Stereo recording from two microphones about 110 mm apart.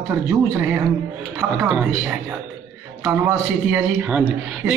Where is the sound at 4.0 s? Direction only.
10° right (ahead or behind).